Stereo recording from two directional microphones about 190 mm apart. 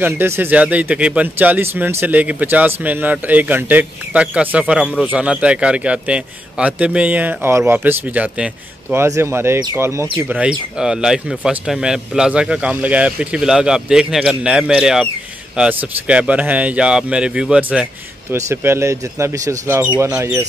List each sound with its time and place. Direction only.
0.0 s a man's voice: 10° right (ahead or behind)